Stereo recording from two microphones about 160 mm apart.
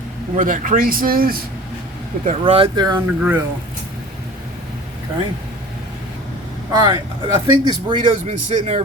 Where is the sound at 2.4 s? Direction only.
35° right (ahead or behind).